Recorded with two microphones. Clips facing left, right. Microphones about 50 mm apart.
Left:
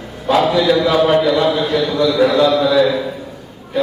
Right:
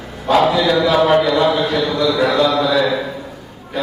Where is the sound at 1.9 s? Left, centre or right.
Centre.